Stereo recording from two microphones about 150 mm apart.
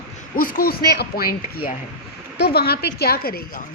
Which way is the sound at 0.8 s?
90° left.